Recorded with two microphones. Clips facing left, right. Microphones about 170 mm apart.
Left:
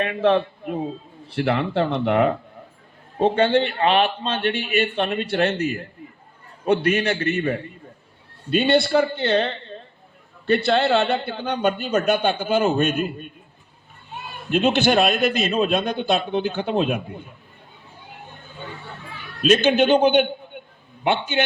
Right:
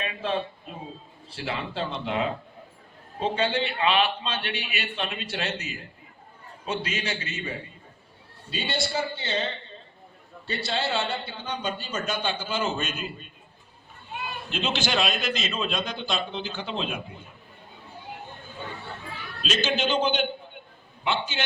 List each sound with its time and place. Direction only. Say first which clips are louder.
0.0 s a man's voice: left 10 dB; 65° left (ahead or behind)
14.5 s a man's voice: left 10 dB; 60° left (ahead or behind)
19.4 s a man's voice: left 10 dB; 55° left (ahead or behind)